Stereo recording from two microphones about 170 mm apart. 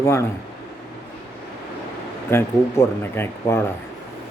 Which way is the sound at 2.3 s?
15° left (ahead or behind).